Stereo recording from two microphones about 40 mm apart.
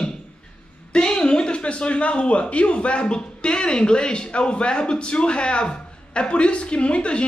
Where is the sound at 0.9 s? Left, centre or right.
Left.